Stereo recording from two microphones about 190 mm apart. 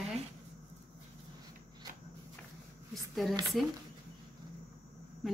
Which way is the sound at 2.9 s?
Centre (ahead or behind).